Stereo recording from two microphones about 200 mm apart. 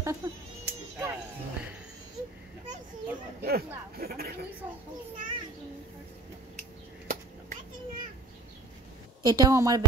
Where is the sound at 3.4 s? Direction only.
50° right (ahead or behind).